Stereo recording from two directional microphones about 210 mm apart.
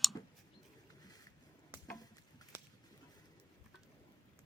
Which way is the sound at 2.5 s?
10° right (ahead or behind).